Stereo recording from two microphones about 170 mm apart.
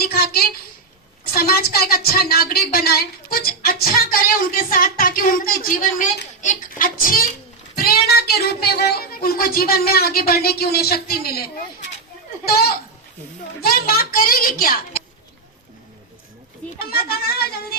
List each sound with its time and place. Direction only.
0.0 s a sound: 65° left (ahead or behind)
1.2 s a woman's voice: 65° left (ahead or behind)
16.7 s a woman's voice: 65° left (ahead or behind)